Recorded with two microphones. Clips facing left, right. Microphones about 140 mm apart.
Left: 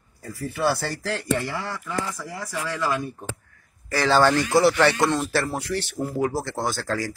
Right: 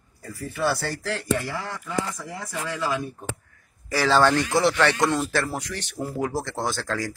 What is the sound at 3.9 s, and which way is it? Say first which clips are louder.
Speech: left 1 dB; centre (ahead or behind).